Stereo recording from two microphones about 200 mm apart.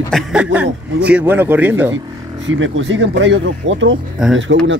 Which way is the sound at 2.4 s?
70° right (ahead or behind).